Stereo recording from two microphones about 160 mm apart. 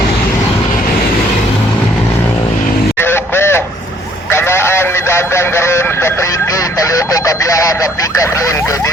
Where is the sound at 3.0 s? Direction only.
15° left (ahead or behind).